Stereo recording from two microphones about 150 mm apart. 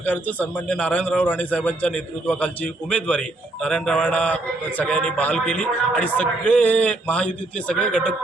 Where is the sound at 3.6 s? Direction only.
5° left (ahead or behind).